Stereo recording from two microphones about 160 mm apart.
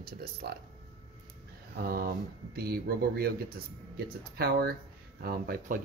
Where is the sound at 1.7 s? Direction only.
70° right (ahead or behind).